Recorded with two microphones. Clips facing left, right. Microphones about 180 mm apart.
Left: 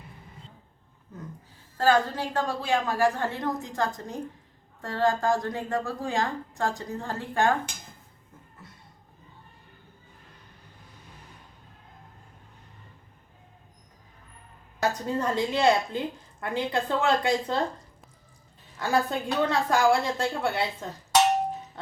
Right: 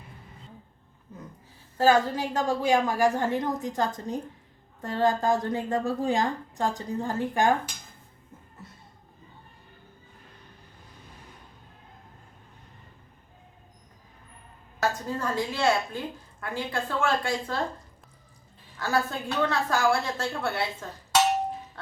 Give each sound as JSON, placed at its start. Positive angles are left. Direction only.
{"t": 1.8, "sound": "a woman's voice", "side_deg": -10}
{"t": 14.8, "sound": "a woman's voice", "side_deg": 20}
{"t": 18.8, "sound": "a woman's voice", "side_deg": 15}